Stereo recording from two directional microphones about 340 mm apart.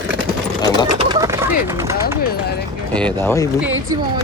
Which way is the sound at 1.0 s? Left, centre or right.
Centre.